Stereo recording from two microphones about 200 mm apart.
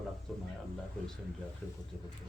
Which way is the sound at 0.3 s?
Centre (ahead or behind).